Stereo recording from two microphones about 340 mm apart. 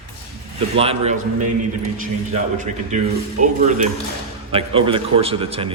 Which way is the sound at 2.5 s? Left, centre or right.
Right.